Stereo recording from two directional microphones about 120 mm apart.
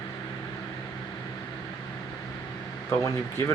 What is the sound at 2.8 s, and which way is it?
Speech, 25° left (ahead or behind).